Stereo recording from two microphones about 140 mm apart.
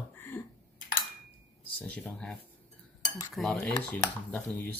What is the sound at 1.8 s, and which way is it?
Speech, 10° left (ahead or behind).